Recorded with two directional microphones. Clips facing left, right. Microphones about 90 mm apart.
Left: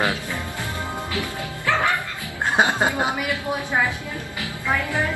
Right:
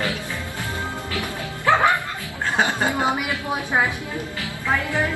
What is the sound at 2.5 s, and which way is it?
Music, 20° left (ahead or behind).